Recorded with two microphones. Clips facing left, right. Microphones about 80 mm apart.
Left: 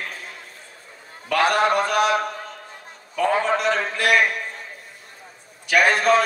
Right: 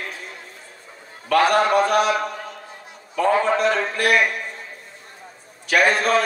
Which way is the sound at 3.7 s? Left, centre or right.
Right.